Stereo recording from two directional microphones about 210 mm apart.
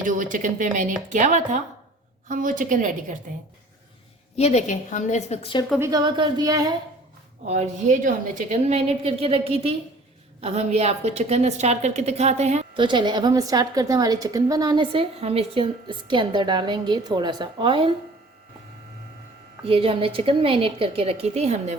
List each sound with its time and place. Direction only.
0.0 s a woman's voice: 40° right (ahead or behind)
4.4 s a woman's voice: 30° left (ahead or behind)
5.8 s a woman's voice: 20° right (ahead or behind)
7.4 s a woman's voice: 35° right (ahead or behind)
19.6 s a woman's voice: 25° right (ahead or behind)